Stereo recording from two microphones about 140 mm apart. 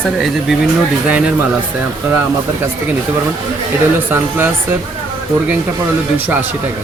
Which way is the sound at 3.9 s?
15° right (ahead or behind).